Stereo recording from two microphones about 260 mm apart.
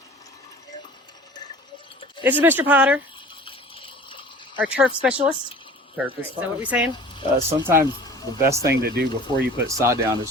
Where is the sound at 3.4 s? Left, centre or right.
Left.